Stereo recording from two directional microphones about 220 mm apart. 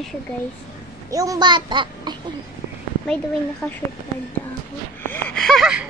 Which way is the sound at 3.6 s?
10° left (ahead or behind).